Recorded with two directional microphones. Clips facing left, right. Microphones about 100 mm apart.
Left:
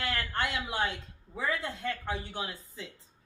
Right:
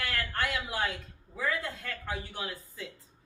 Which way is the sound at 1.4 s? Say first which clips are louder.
Even; 25° left (ahead or behind).